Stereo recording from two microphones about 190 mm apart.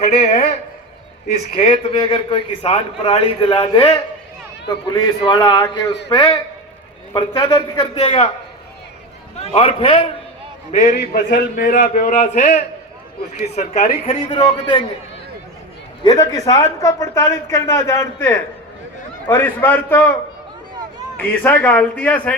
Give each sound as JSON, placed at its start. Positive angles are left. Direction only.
{"t": 0.2, "sound": "a man's voice", "side_deg": 35}
{"t": 1.6, "sound": "a man's voice", "side_deg": 25}
{"t": 4.9, "sound": "a man's voice", "side_deg": 25}
{"t": 9.5, "sound": "a man's voice", "side_deg": 30}
{"t": 10.8, "sound": "a man's voice", "side_deg": 55}
{"t": 16.0, "sound": "a man's voice", "side_deg": 20}
{"t": 21.2, "sound": "a man's voice", "side_deg": 10}